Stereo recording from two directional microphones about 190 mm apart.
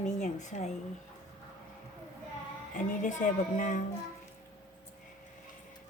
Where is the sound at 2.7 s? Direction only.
40° left (ahead or behind).